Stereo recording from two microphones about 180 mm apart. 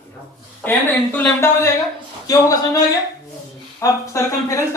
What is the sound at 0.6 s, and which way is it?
Speech, 10° left (ahead or behind).